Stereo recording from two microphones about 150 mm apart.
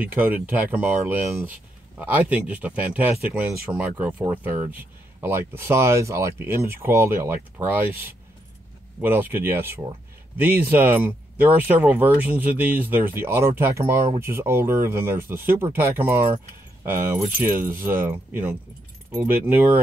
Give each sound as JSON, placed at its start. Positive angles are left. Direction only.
{"t": 0.0, "sound": "speech", "side_deg": -10}
{"t": 17.4, "sound": "speech", "side_deg": -15}